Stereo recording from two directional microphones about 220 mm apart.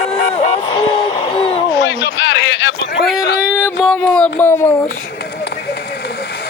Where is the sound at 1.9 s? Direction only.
55° left (ahead or behind).